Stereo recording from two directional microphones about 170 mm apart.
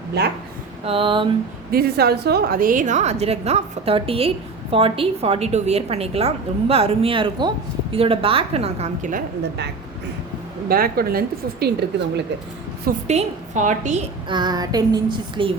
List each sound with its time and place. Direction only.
0.2 s a woman's voice: 75° right (ahead or behind)
0.9 s a woman's voice: 30° right (ahead or behind)
1.7 s a woman's voice: 65° right (ahead or behind); by 9.2 s 50° right (ahead or behind)
10.7 s a woman's voice: 60° right (ahead or behind)
13.1 s a woman's voice: 45° right (ahead or behind)
14.3 s female singing: 25° right (ahead or behind)